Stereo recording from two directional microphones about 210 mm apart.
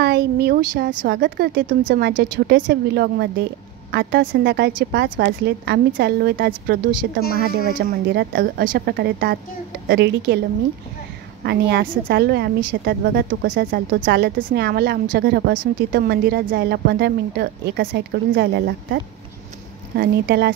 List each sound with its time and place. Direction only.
0.0 s speech: 50° right (ahead or behind)
1.7 s speech: 40° right (ahead or behind)
7.9 s speech: 50° right (ahead or behind)
11.4 s speech: 55° right (ahead or behind)
14.0 s speech: 50° right (ahead or behind)
20.0 s speech: 55° right (ahead or behind)